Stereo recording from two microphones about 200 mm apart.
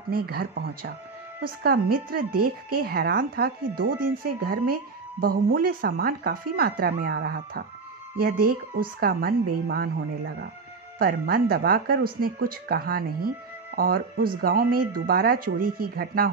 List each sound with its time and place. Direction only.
0.1 s speech: 50° right (ahead or behind)